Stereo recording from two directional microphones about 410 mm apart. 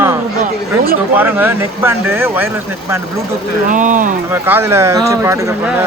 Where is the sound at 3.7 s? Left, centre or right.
Centre.